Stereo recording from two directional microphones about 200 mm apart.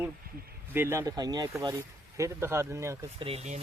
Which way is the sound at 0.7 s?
10° right (ahead or behind).